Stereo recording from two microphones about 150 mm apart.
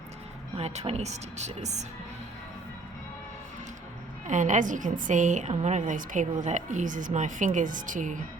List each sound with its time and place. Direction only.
0.5 s speech: 45° right (ahead or behind)
4.3 s a woman's voice: 55° right (ahead or behind)